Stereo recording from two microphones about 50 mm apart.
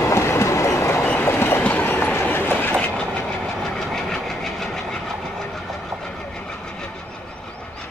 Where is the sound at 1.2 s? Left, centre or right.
Left.